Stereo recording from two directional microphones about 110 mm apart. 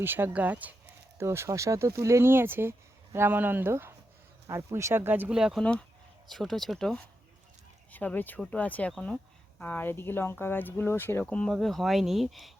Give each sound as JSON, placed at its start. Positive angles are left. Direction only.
{"t": 0.0, "sound": "speech", "side_deg": -20}
{"t": 5.4, "sound": "speech", "side_deg": -5}
{"t": 7.9, "sound": "speech", "side_deg": 15}
{"t": 11.5, "sound": "speech", "side_deg": 0}